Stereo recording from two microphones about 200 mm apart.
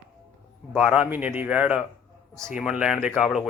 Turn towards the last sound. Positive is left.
turn(degrees=0)  # may be behind; listen again after turning